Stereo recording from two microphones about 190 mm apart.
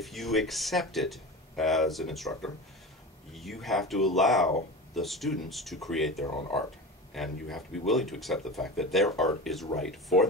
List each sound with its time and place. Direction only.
0.0 s speech: centre (ahead or behind)